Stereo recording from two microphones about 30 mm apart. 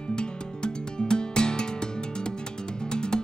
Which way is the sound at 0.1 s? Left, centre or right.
Left.